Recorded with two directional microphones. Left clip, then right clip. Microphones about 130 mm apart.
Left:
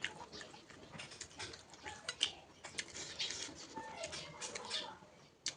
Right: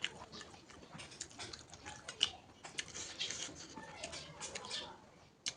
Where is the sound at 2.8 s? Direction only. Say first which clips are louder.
Even; 15° right (ahead or behind).